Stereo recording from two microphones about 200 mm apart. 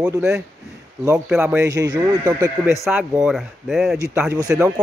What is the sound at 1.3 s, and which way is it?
Speech, 5° right (ahead or behind).